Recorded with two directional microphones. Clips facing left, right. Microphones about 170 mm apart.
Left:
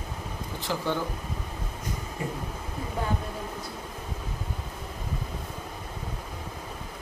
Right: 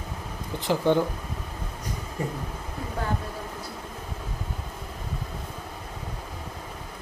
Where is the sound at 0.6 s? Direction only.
20° right (ahead or behind).